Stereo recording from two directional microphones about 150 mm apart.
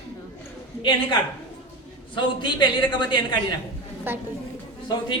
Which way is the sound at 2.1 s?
30° left (ahead or behind).